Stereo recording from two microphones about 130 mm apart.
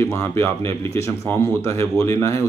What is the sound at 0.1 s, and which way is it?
Speech, 20° left (ahead or behind).